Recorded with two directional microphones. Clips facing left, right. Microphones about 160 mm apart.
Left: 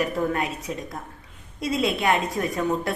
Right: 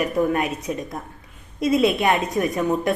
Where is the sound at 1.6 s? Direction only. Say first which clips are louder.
Right 5 dB; 20° right (ahead or behind).